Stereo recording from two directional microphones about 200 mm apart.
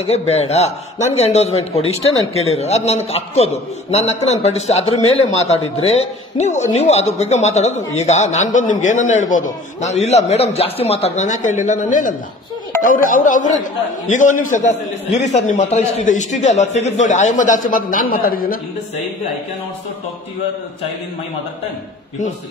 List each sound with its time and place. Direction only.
0.3 s a man's voice: 30° left (ahead or behind)